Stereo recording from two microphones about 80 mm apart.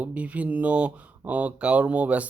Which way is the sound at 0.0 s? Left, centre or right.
Centre.